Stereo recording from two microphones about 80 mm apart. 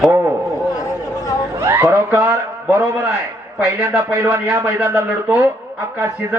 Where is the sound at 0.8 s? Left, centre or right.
Left.